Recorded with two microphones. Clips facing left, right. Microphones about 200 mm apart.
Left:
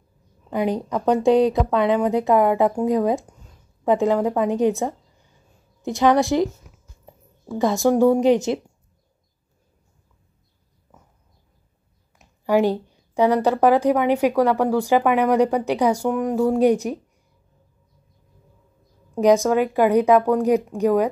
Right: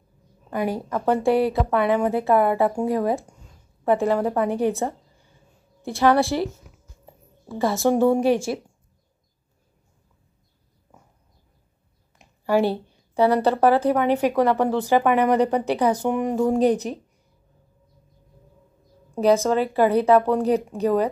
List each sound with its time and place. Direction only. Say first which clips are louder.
0.5 s a woman's voice: left 3 dB; 20° left (ahead or behind)
7.5 s a woman's voice: left 2 dB; 15° left (ahead or behind)
12.4 s a woman's voice: left 2 dB; 15° left (ahead or behind)
16.1 s speech: left 1 dB; 5° right (ahead or behind)
16.5 s a woman's voice: left 2 dB; 10° left (ahead or behind)
19.1 s a woman's voice: left 2 dB; 15° left (ahead or behind)